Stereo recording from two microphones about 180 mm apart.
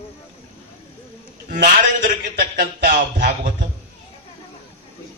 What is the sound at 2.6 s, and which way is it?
Speech, 50° right (ahead or behind).